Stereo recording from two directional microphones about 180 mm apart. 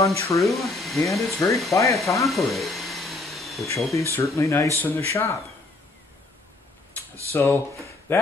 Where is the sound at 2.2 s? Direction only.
Centre (ahead or behind).